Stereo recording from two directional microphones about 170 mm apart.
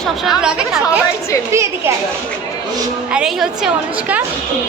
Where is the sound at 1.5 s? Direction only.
15° right (ahead or behind).